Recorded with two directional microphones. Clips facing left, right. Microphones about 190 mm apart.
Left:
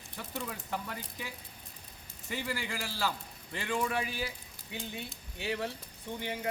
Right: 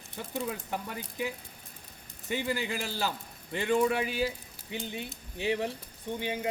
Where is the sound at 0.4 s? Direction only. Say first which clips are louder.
Right 3 dB; 20° right (ahead or behind).